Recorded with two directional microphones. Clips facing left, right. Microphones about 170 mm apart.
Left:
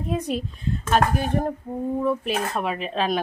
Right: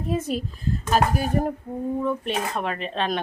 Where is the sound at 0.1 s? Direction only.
Centre (ahead or behind).